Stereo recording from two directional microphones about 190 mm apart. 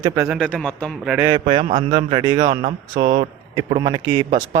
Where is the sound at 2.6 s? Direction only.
50° right (ahead or behind).